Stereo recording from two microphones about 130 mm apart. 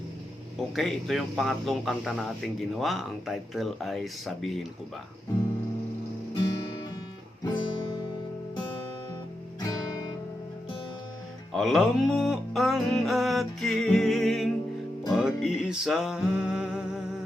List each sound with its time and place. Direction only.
0.8 s speech: centre (ahead or behind)
6.3 s music: 35° left (ahead or behind)
7.4 s guitar: 35° left (ahead or behind)
9.6 s guitar: 25° left (ahead or behind)
11.5 s music: 5° right (ahead or behind)